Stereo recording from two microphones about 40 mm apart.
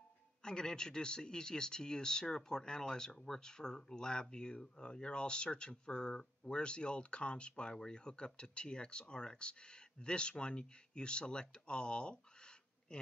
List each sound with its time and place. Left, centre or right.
0.4 s a man's voice: centre